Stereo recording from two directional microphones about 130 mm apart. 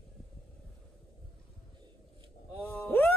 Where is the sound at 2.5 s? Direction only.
15° left (ahead or behind).